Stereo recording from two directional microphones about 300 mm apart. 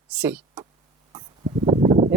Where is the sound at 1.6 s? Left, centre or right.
Centre.